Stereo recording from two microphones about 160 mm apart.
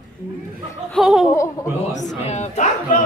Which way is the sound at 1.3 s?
20° left (ahead or behind).